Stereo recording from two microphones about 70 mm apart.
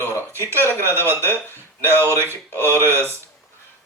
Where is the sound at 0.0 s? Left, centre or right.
Left.